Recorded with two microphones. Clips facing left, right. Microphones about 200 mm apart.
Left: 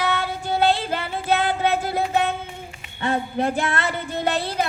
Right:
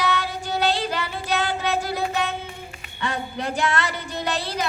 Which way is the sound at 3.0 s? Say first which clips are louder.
Left 5 dB; 50° left (ahead or behind).